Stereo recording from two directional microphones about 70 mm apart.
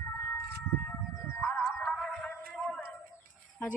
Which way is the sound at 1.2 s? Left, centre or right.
Left.